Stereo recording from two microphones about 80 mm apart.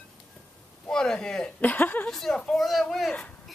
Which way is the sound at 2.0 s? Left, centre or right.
Centre.